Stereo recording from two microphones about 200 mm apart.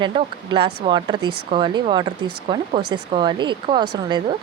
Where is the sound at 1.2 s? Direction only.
90° right.